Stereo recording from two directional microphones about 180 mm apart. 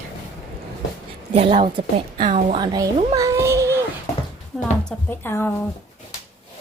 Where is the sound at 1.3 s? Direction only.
30° right (ahead or behind).